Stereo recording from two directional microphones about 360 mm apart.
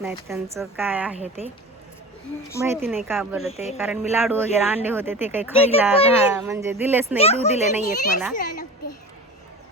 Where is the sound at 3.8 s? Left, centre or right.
Centre.